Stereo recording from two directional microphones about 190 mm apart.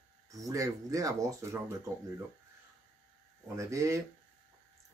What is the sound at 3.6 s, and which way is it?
Speech, 15° right (ahead or behind).